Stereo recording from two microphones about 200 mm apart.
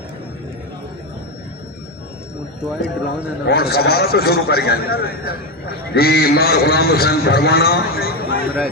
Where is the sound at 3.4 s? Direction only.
50° left (ahead or behind).